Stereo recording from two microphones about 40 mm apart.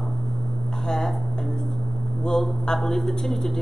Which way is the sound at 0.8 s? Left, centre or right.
Centre.